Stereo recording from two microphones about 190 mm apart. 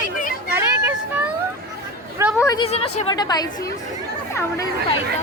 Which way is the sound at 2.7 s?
30° left (ahead or behind).